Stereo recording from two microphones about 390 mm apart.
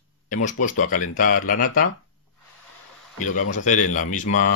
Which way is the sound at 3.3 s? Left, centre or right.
Centre.